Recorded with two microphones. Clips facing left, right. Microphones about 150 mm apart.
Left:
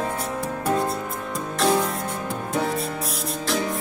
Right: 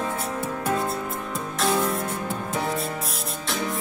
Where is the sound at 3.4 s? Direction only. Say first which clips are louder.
Left 4 dB; centre (ahead or behind).